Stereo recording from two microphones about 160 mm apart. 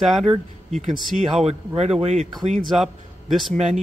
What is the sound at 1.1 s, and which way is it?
Speech, 45° right (ahead or behind).